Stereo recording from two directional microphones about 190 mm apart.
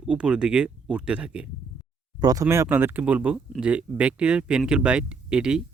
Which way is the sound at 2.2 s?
20° right (ahead or behind).